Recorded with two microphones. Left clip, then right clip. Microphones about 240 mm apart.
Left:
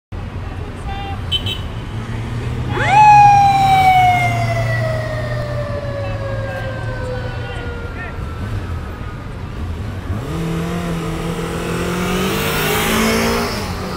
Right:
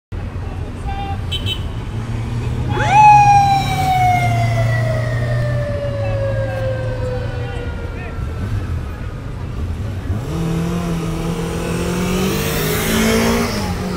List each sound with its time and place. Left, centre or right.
1.3 s vehicle: centre
2.7 s emergency vehicle: centre; by 4.7 s left
10.3 s vehicle: centre; by 13.7 s left